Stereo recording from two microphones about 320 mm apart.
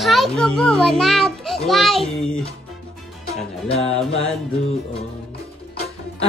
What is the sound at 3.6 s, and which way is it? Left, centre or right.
Music, centre.